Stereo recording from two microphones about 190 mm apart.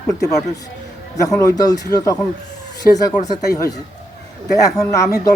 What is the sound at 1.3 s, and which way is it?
Speech, 15° left (ahead or behind).